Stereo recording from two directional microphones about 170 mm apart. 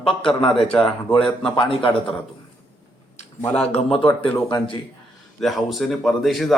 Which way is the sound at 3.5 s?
35° left (ahead or behind).